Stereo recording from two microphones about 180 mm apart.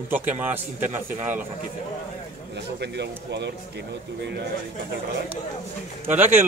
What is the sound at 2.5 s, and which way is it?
Speech, 70° right (ahead or behind).